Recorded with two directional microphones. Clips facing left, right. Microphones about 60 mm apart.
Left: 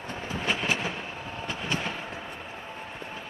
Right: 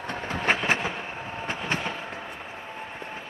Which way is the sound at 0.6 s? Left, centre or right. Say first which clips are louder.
Right 3 dB; right.